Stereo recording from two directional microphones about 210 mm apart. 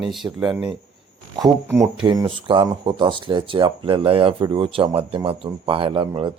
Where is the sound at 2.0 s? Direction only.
20° right (ahead or behind).